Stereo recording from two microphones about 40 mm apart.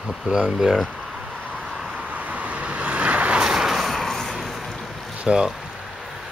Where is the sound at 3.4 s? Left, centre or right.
Centre.